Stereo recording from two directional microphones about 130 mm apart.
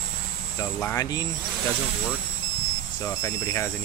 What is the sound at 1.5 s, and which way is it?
Speech, centre (ahead or behind).